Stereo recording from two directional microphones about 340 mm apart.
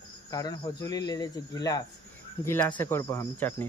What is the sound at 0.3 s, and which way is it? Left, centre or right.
Speech, centre.